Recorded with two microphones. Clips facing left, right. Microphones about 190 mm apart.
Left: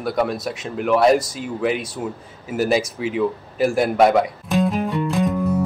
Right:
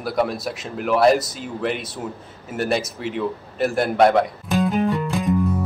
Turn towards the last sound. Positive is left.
turn(degrees=0)  # may be behind; listen again after turning